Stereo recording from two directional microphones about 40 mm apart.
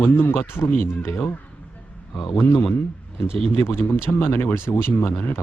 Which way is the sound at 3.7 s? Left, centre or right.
Left.